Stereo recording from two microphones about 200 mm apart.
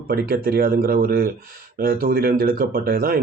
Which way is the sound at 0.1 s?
50° right (ahead or behind).